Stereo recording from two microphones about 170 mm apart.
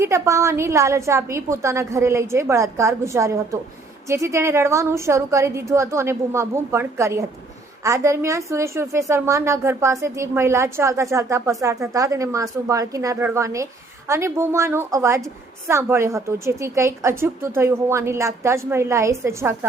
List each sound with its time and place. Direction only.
0.0 s a woman's voice: 15° right (ahead or behind)